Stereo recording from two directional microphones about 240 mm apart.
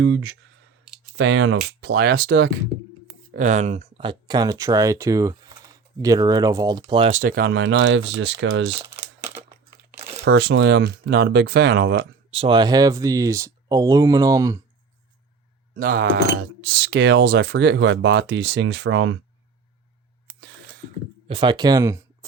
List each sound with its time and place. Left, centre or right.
0.0 s speech: right
3.3 s speech: right
10.2 s speech: right
12.3 s speech: right
15.7 s speech: right
21.2 s speech: centre